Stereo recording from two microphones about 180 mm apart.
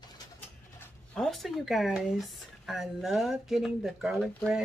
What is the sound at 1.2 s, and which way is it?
Speech, centre (ahead or behind).